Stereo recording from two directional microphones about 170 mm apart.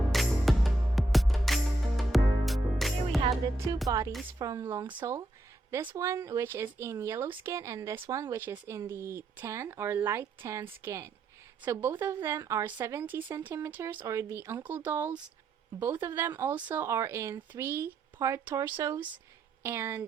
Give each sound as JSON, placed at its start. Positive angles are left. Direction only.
{"t": 0.1, "sound": "music", "side_deg": 0}
{"t": 3.8, "sound": "a woman's voice", "side_deg": -20}